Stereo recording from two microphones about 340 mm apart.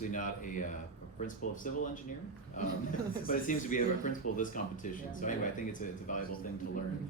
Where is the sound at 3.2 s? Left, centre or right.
Left.